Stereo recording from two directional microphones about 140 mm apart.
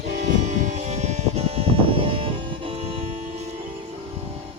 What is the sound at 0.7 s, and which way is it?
Music, 55° right (ahead or behind).